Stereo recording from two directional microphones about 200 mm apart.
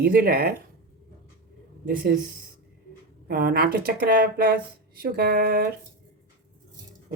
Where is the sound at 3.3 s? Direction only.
50° right (ahead or behind).